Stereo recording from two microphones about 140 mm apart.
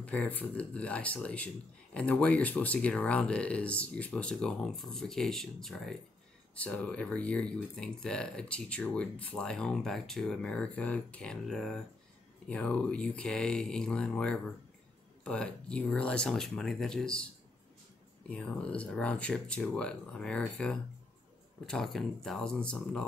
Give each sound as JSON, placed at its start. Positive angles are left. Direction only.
{"t": 0.0, "sound": "speech", "side_deg": 10}
{"t": 18.3, "sound": "speech", "side_deg": 5}